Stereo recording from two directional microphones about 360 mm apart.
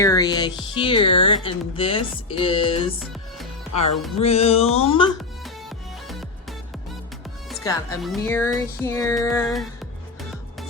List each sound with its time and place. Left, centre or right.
0.0 s speech: centre
4.2 s speech: centre
7.5 s speech: centre